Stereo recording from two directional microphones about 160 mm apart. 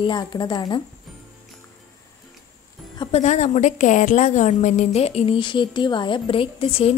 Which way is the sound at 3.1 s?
45° left (ahead or behind).